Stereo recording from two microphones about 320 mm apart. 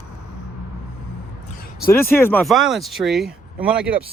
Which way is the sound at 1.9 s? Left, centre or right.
Centre.